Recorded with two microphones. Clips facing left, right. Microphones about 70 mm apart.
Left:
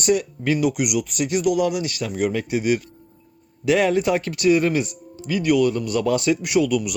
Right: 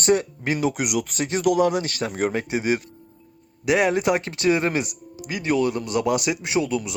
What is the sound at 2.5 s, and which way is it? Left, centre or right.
Speech, right.